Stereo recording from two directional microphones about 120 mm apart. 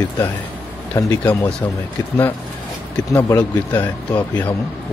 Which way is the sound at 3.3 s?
35° left (ahead or behind).